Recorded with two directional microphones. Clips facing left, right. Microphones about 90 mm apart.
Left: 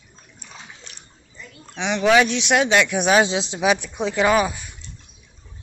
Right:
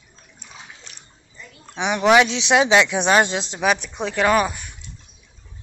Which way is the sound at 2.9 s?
5° left (ahead or behind).